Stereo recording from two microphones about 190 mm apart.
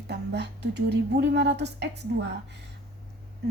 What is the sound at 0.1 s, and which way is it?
A woman's voice, 65° right (ahead or behind).